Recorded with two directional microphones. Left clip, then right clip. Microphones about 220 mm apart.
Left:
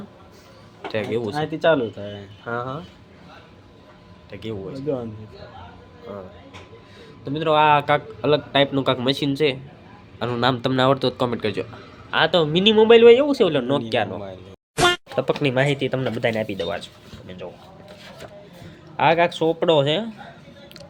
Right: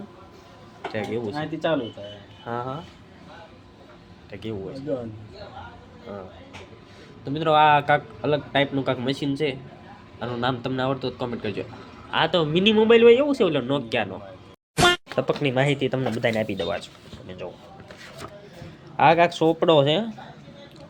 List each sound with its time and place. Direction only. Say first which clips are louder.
0.9 s speech: left 4 dB; 10° left (ahead or behind)
1.3 s speech: left 7 dB; 40° left (ahead or behind)
2.5 s a man's voice: left 2 dB; 5° left (ahead or behind)
4.3 s a man's voice: left 2 dB; 5° left (ahead or behind)
7.3 s a man's voice: left 1 dB; 5° left (ahead or behind); by 11.6 s 20° left (ahead or behind)
12.1 s a man's voice: left 3 dB; 5° left (ahead or behind)
18.9 s a man's voice: even; centre (ahead or behind)